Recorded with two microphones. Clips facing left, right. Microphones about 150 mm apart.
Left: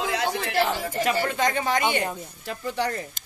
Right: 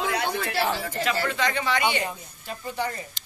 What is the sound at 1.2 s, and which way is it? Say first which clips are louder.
Speech: left 2 dB; 45° left (ahead or behind).